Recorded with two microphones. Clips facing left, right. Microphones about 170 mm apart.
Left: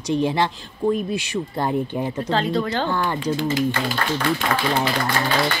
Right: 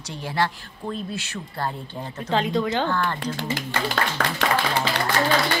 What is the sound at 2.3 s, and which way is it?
Speech, 15° right (ahead or behind).